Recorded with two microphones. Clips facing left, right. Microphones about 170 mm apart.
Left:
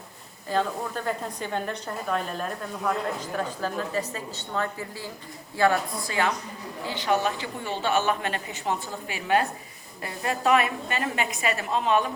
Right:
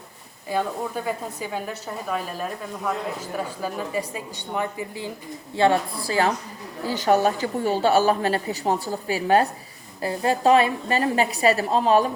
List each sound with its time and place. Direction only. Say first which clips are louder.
0.5 s a woman's voice: right 1 dB; 10° right (ahead or behind); by 12.1 s 35° right (ahead or behind)